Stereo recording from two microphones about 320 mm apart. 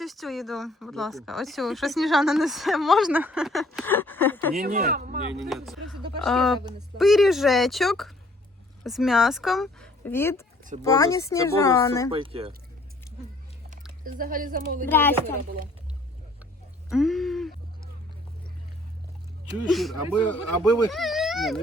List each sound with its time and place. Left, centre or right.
0.0 s speech: centre
4.5 s speech: right
5.4 s speech: centre
12.1 s speech: centre
14.0 s speech: right
14.8 s speech: centre
16.9 s a sound: centre
19.7 s speech: centre